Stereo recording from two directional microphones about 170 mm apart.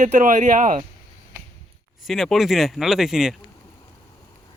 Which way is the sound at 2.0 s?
Centre (ahead or behind).